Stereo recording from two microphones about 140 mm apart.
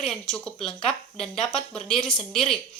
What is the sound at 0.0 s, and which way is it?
Speech, 5° left (ahead or behind).